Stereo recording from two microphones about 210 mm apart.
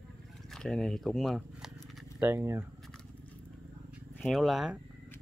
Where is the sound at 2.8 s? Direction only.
5° left (ahead or behind).